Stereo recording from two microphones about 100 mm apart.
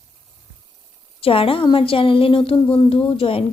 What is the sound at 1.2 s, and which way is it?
A woman's voice, 70° left (ahead or behind).